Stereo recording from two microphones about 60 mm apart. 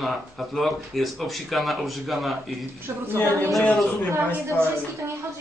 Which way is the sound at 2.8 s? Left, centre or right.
Right.